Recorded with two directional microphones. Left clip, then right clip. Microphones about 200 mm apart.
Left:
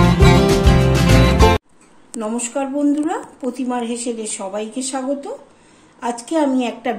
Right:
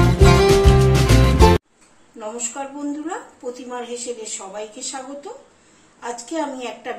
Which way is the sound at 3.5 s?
55° left (ahead or behind).